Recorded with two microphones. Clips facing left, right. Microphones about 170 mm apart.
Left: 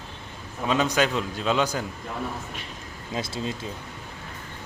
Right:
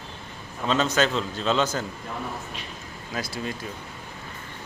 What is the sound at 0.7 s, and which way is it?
A man's voice, 15° left (ahead or behind).